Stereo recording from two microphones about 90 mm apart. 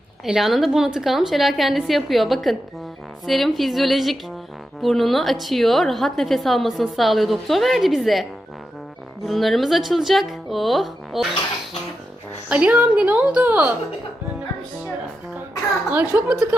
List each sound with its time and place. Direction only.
0.3 s a woman's voice: 5° right (ahead or behind)
12.5 s a woman's voice: 15° right (ahead or behind)
15.9 s a woman's voice: 15° right (ahead or behind)